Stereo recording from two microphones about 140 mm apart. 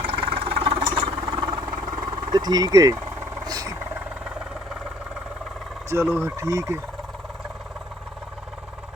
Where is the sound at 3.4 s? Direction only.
25° right (ahead or behind).